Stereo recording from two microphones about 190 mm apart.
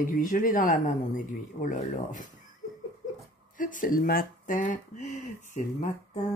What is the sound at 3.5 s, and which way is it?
Speech, 45° left (ahead or behind).